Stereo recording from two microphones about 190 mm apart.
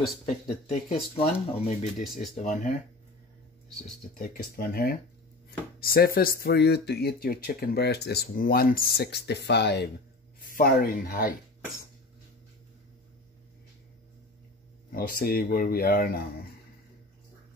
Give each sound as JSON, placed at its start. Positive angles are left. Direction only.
{"t": 0.3, "sound": "speech", "side_deg": 35}
{"t": 4.2, "sound": "speech", "side_deg": 45}
{"t": 10.4, "sound": "speech", "side_deg": 50}
{"t": 14.9, "sound": "speech", "side_deg": 50}